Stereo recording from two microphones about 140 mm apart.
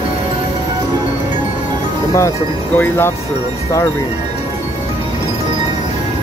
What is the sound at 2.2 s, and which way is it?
Speech, 20° left (ahead or behind).